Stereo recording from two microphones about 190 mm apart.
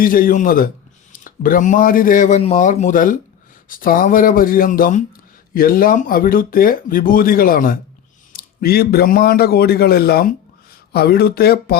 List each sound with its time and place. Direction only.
0.0 s a man's voice: 45° left (ahead or behind)